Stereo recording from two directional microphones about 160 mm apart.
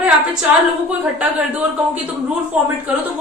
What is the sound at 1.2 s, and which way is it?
Speech, 5° right (ahead or behind).